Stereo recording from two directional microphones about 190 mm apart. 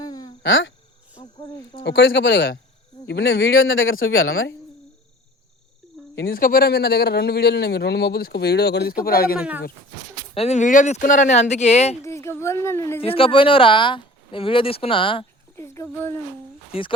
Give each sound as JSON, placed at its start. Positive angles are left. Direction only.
{"t": 0.0, "sound": "a sound", "side_deg": 20}
{"t": 0.4, "sound": "speech", "side_deg": 85}
{"t": 1.8, "sound": "speech", "side_deg": 70}
{"t": 3.1, "sound": "speech", "side_deg": 55}
{"t": 3.5, "sound": "speech", "side_deg": 90}
{"t": 6.1, "sound": "speech", "side_deg": 50}
{"t": 9.4, "sound": "speech", "side_deg": -10}
{"t": 10.3, "sound": "speech", "side_deg": 35}
{"t": 12.0, "sound": "speech", "side_deg": 15}
{"t": 13.0, "sound": "speech", "side_deg": 30}
{"t": 15.5, "sound": "a sound", "side_deg": 15}